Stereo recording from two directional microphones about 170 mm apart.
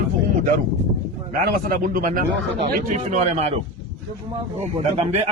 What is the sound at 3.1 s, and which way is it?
Speech, 40° right (ahead or behind).